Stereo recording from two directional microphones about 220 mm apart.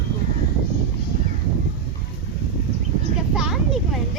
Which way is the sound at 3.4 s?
Centre (ahead or behind).